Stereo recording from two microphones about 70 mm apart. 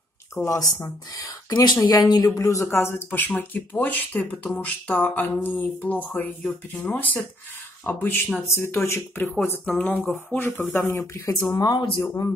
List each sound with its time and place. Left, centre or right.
0.4 s speech: left
0.8 s speech: left
2.3 s speech: left
2.7 s speech: left
9.7 s speech: centre
10.3 s speech: left
11.1 s speech: left
11.5 s speech: left